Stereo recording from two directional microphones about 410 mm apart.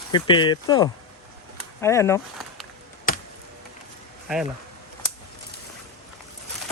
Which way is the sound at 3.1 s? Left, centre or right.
Centre.